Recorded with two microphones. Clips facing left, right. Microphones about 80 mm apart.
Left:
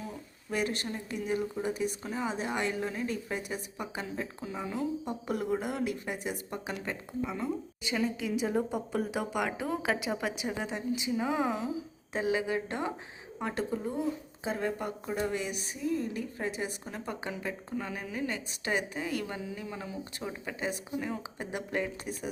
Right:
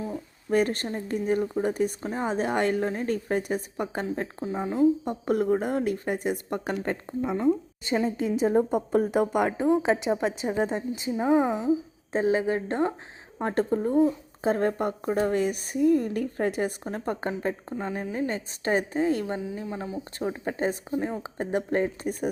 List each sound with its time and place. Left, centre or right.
0.5 s a woman's voice: right
9.5 s a woman's voice: right
12.1 s a woman's voice: right
17.4 s a woman's voice: right